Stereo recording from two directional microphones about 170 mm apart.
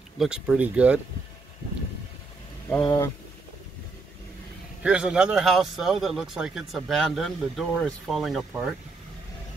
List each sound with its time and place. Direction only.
0.2 s speech: 5° right (ahead or behind)
2.8 s speech: 25° left (ahead or behind)
4.8 s a man's voice: 5° right (ahead or behind)